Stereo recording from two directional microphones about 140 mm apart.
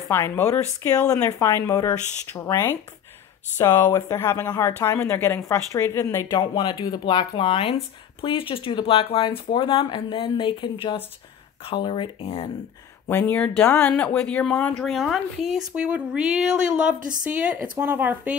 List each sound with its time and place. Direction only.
0.1 s speech: 20° left (ahead or behind); by 12.4 s 40° left (ahead or behind)
13.1 s speech: 15° left (ahead or behind); by 17.1 s 5° right (ahead or behind)
17.1 s speech: 70° right (ahead or behind)
17.4 s speech: 10° right (ahead or behind)